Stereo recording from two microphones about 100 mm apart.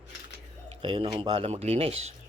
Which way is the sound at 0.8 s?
50° right (ahead or behind).